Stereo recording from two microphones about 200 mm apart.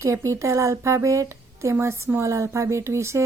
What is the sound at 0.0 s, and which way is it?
Speech, 15° right (ahead or behind).